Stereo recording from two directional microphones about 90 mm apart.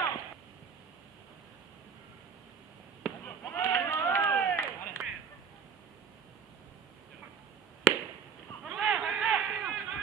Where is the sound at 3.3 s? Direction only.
30° left (ahead or behind).